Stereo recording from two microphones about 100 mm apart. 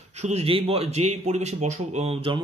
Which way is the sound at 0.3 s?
80° right.